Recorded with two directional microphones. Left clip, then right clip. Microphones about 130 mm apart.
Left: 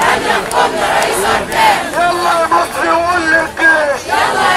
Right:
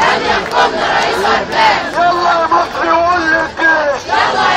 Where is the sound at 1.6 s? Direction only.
50° left (ahead or behind).